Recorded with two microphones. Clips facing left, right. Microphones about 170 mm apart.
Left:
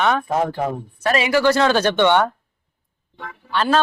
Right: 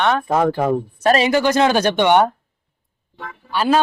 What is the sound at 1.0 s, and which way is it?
Speech, 30° right (ahead or behind).